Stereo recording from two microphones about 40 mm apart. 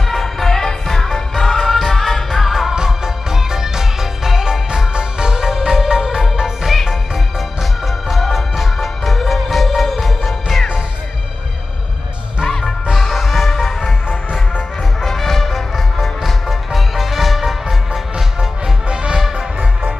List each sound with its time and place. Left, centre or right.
0.1 s music: centre
2.7 s music: centre
12.4 s music: centre
12.9 s music: centre
15.0 s music: centre
18.9 s music: right
19.1 s music: centre